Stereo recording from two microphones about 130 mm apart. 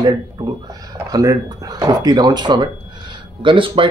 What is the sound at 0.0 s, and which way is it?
Speech, 30° right (ahead or behind).